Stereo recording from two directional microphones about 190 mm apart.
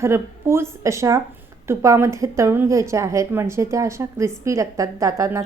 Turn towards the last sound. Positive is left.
turn(degrees=-15)  # may be behind; listen again after turning